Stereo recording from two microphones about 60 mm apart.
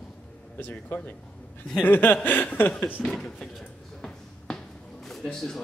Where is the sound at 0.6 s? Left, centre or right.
Left.